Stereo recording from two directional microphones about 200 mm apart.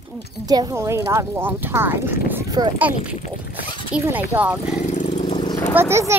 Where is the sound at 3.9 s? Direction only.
10° right (ahead or behind).